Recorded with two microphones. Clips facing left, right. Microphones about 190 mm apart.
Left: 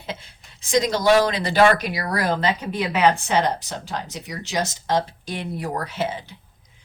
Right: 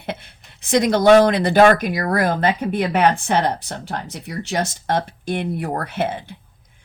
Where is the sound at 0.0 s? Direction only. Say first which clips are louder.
Right 4 dB; 60° right (ahead or behind).